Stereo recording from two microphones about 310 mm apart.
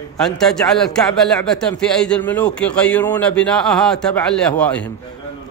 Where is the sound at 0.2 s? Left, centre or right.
Centre.